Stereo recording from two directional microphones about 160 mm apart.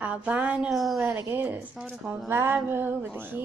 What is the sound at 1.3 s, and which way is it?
Speech, 15° right (ahead or behind).